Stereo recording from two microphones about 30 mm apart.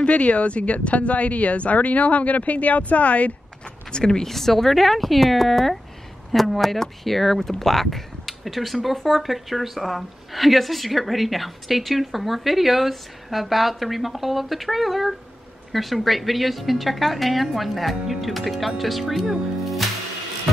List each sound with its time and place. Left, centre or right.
0.0 s speech: left
3.9 s speech: left
4.3 s a woman's voice: centre